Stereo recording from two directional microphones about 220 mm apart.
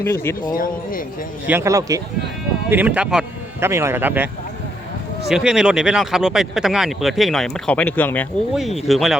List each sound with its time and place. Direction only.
0.0 s speech: 10° left (ahead or behind)
0.5 s speech: 40° left (ahead or behind)
1.5 s a man's voice: 10° right (ahead or behind)
5.3 s speech: 5° right (ahead or behind)